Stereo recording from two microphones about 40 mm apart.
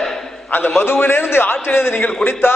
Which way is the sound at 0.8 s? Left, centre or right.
Left.